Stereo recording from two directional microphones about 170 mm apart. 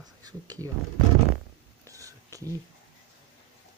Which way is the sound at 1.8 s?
20° right (ahead or behind).